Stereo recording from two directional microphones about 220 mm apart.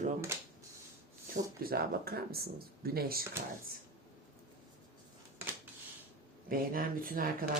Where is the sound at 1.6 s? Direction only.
45° right (ahead or behind).